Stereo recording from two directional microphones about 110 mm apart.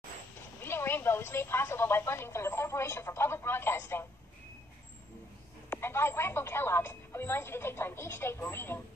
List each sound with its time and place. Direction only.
0.6 s speech: 20° left (ahead or behind)
5.7 s speech: 20° left (ahead or behind)